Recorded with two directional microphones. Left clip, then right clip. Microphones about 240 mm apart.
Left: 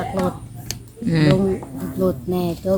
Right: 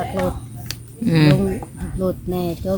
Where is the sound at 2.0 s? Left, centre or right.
Centre.